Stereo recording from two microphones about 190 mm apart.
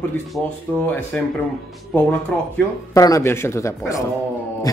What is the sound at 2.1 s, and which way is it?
Speech, 15° left (ahead or behind).